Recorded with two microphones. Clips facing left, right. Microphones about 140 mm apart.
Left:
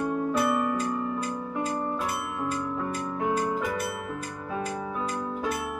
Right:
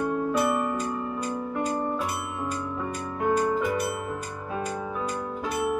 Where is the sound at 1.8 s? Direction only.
Centre (ahead or behind).